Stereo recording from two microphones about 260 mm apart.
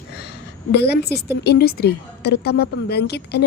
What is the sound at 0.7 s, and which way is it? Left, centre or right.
A woman's voice, left.